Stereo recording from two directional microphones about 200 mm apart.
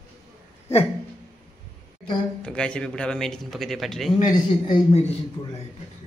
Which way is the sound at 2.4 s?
5° left (ahead or behind).